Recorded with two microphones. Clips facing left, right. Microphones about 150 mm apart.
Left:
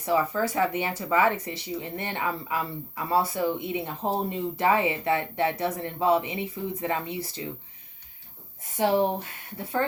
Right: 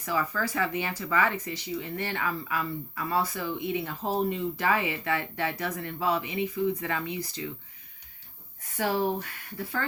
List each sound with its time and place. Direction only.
0.0 s speech: 25° left (ahead or behind)
8.7 s speech: 25° left (ahead or behind)